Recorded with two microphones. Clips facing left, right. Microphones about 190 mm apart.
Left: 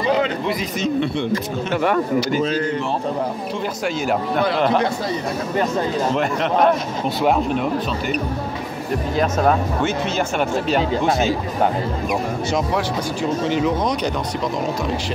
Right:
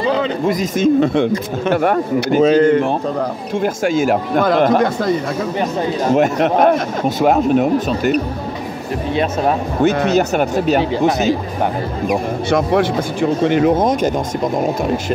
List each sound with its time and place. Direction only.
0.5 s speech: 45° right (ahead or behind)
6.1 s speech: 45° right (ahead or behind)
10.1 s speech: 40° right (ahead or behind)
12.4 s speech: 60° right (ahead or behind)